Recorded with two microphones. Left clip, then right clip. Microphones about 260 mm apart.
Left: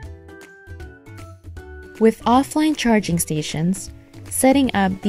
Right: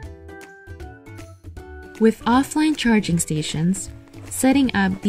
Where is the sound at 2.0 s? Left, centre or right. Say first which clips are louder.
Left 2 dB; left.